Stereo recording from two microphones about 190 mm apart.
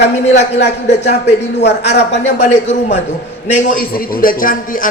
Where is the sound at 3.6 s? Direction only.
50° left (ahead or behind).